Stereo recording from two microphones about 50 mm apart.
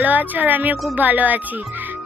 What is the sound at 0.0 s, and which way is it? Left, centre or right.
A woman's voice, right.